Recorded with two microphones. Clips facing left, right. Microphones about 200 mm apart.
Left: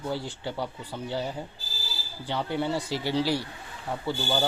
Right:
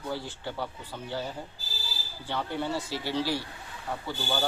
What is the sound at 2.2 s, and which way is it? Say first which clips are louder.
Speech: left 3 dB; 15° left (ahead or behind).